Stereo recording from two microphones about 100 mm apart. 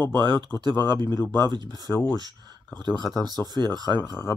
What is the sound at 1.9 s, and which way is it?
Speech, 25° left (ahead or behind).